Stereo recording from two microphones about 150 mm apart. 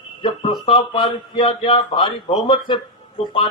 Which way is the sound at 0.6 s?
40° left (ahead or behind).